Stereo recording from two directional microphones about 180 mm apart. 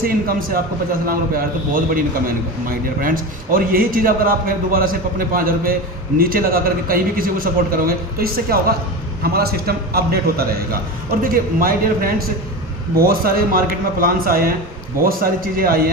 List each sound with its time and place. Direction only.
0.0 s a man's voice: 55° right (ahead or behind)